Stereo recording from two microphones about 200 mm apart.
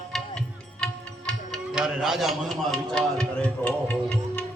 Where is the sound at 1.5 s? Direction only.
5° right (ahead or behind).